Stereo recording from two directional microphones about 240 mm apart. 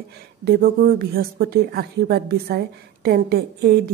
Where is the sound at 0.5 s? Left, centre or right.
Right.